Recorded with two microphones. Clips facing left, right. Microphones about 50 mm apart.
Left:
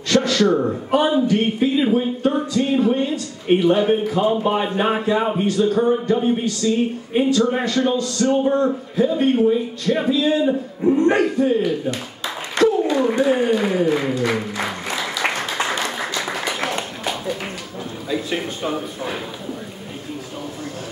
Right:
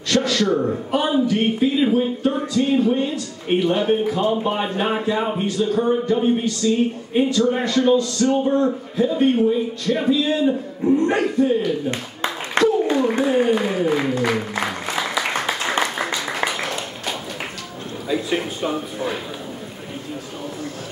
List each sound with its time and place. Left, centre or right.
0.1 s speech: centre
11.9 s a sound: right
13.4 s speech: centre
14.6 s music: centre
18.0 s speech: centre